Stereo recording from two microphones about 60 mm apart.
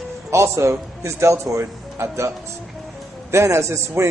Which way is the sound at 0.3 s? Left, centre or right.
Right.